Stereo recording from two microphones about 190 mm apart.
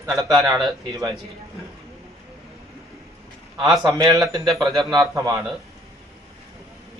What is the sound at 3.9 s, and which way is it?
Speech, 15° right (ahead or behind).